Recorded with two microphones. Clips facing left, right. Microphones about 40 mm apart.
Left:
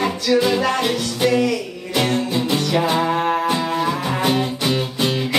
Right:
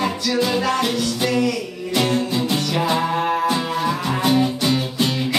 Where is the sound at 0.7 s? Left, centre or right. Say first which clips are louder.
Even; centre.